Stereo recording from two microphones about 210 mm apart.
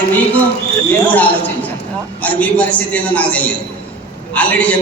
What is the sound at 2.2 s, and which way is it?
A man's voice, 5° left (ahead or behind).